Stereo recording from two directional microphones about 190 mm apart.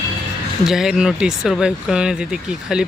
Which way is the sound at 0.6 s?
Centre (ahead or behind).